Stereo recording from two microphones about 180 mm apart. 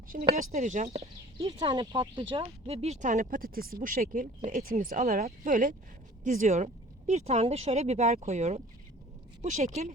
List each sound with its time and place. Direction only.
0.2 s speech: 40° right (ahead or behind)
1.5 s speech: 25° right (ahead or behind)